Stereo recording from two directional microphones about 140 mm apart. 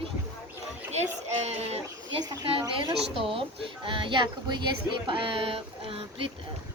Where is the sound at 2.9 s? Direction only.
40° right (ahead or behind).